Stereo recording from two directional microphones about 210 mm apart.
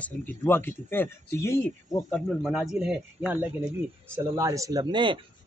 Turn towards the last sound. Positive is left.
turn(degrees=-20)  # may be behind; listen again after turning